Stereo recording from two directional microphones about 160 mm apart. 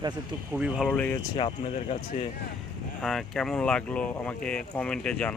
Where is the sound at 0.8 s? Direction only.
10° left (ahead or behind).